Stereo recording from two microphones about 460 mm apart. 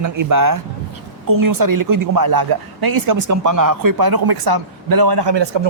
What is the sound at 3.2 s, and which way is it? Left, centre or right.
Speech, right.